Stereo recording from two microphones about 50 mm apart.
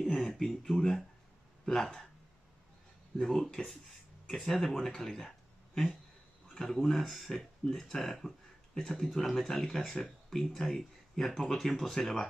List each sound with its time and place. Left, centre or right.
0.0 s speech: centre
3.2 s speech: centre
6.6 s speech: centre